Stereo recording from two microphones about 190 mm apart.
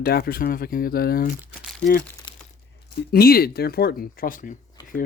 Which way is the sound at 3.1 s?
55° left (ahead or behind).